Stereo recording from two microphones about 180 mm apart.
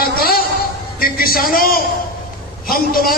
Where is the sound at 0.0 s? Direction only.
55° left (ahead or behind).